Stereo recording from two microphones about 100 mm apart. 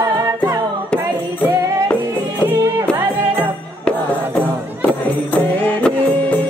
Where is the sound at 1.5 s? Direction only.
30° right (ahead or behind).